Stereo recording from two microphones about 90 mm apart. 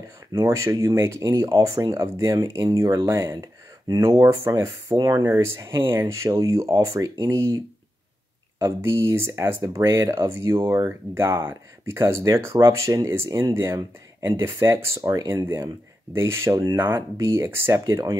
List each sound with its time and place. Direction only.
0.3 s speech: 35° right (ahead or behind)
8.5 s speech: 35° right (ahead or behind)